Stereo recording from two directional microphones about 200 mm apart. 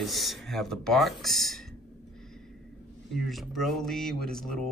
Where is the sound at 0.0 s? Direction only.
Centre (ahead or behind).